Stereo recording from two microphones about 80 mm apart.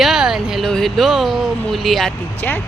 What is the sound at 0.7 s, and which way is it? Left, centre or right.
Speech, centre.